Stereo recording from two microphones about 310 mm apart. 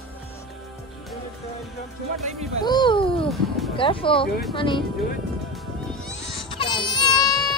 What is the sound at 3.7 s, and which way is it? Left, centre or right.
Speech, centre.